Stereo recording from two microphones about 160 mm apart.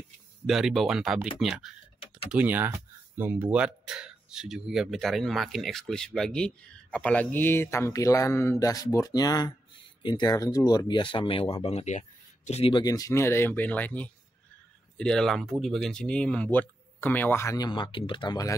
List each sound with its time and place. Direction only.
0.5 s speech: centre (ahead or behind); by 12.8 s 40° left (ahead or behind)
12.8 s speech: 20° left (ahead or behind)
17.6 s speech: 30° left (ahead or behind)